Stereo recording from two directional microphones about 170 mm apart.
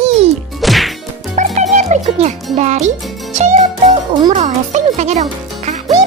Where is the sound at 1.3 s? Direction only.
45° right (ahead or behind).